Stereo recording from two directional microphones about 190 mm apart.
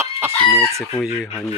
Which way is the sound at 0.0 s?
15° right (ahead or behind).